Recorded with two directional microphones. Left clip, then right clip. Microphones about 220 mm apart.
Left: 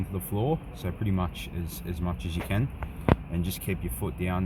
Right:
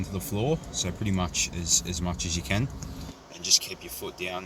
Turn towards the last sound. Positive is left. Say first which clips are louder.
# even
turn(degrees=10)  # may be behind; listen again after turning